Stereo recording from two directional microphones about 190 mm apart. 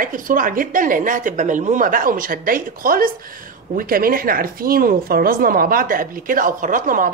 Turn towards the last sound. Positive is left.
turn(degrees=-45)  # may be behind; listen again after turning